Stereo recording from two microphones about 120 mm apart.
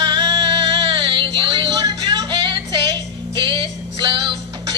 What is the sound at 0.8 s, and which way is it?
Music, 45° right (ahead or behind).